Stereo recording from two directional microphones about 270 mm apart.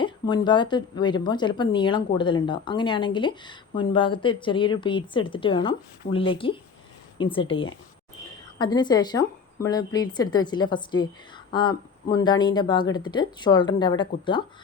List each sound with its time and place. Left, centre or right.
0.0 s a woman's voice: centre
12.1 s a woman's voice: centre